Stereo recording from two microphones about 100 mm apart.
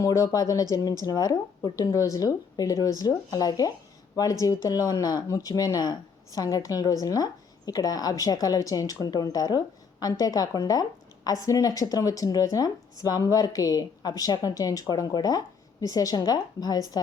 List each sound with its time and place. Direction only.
0.0 s speech: 35° left (ahead or behind)